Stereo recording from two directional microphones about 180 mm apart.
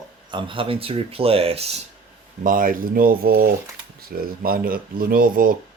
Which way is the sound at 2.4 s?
50° right (ahead or behind).